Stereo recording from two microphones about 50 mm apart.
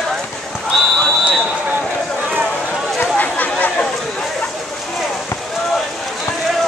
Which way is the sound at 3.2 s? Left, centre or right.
Left.